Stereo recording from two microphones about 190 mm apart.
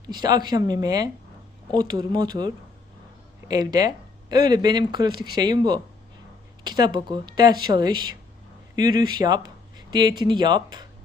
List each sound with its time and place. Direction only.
0.1 s speech: 20° right (ahead or behind)
3.5 s speech: 20° right (ahead or behind)